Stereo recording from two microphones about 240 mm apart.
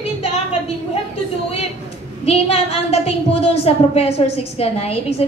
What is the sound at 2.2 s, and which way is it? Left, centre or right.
A woman's voice, left.